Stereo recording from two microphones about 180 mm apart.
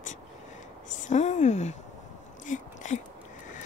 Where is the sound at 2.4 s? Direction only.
45° left (ahead or behind).